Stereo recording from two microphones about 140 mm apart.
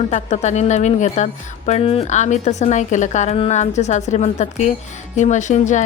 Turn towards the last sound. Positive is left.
turn(degrees=60)  # may be behind; listen again after turning